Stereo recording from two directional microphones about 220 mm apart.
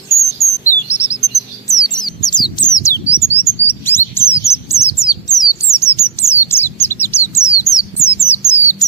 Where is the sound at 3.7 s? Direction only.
10° left (ahead or behind).